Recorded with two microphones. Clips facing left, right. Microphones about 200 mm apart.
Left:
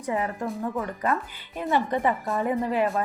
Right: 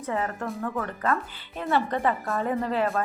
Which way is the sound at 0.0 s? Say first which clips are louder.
Left 1 dB; 15° left (ahead or behind).